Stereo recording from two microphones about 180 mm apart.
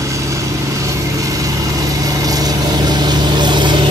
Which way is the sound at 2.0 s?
20° right (ahead or behind).